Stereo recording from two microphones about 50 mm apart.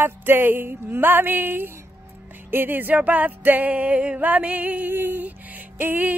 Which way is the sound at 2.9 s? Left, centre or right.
Right.